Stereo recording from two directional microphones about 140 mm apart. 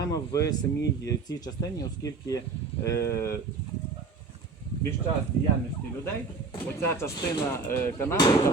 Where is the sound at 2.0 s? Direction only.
25° left (ahead or behind).